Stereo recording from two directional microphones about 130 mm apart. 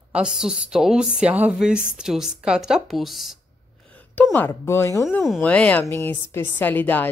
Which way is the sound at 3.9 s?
15° left (ahead or behind).